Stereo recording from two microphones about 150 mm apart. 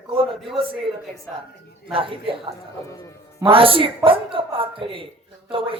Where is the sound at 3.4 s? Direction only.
35° right (ahead or behind).